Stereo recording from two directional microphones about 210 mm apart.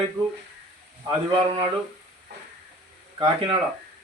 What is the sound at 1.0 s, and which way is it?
Speech, 20° right (ahead or behind).